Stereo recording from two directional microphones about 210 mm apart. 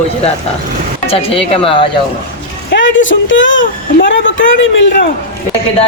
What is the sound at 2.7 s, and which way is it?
Speech, 60° left (ahead or behind).